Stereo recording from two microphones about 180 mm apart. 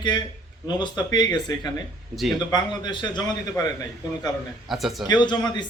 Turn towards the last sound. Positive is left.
turn(degrees=25)  # may be behind; listen again after turning